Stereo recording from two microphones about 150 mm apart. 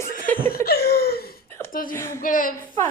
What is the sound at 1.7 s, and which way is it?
Speech, 70° left (ahead or behind).